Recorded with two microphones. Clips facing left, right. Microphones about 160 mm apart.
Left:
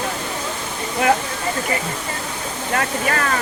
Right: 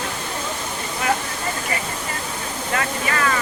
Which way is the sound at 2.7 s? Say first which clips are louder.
Left 3 dB; 50° left (ahead or behind).